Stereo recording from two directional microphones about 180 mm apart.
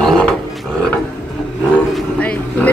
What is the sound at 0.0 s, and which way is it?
Roaring cats, centre (ahead or behind).